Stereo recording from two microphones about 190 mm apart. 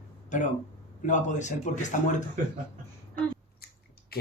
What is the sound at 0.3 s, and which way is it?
A man's voice, 40° left (ahead or behind).